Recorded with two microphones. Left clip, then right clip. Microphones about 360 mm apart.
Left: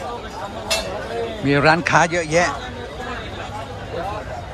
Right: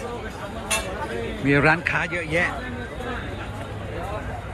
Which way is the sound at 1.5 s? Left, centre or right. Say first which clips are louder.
Left 4 dB; centre.